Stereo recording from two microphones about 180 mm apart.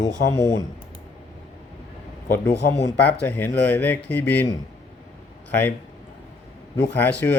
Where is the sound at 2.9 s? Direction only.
10° left (ahead or behind).